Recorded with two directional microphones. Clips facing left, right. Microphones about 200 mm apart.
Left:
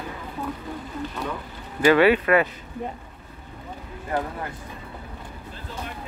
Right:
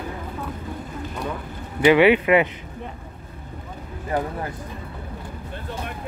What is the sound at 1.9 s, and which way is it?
Speech, 15° right (ahead or behind).